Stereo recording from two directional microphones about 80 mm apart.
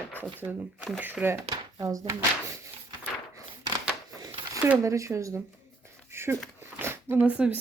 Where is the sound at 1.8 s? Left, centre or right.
Right.